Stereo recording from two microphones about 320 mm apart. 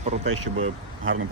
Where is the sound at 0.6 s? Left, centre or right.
Right.